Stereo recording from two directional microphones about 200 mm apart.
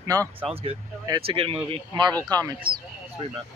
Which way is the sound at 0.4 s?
30° right (ahead or behind).